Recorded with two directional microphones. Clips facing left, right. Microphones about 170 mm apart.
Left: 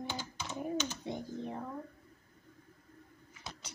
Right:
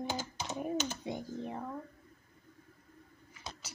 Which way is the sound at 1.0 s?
15° right (ahead or behind).